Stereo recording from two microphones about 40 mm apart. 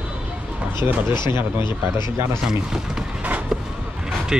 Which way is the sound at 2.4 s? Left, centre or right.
Centre.